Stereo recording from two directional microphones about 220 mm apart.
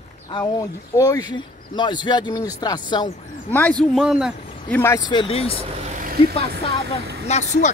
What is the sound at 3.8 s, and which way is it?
Speech, centre (ahead or behind).